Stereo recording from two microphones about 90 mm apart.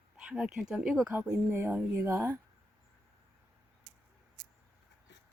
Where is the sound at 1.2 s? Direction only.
25° right (ahead or behind).